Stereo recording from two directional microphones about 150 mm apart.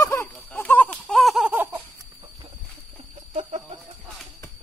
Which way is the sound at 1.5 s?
15° right (ahead or behind).